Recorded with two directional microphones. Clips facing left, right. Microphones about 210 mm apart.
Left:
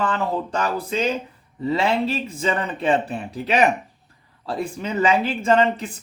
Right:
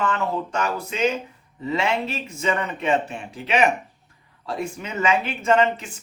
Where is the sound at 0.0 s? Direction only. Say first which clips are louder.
Left 1 dB; 35° left (ahead or behind).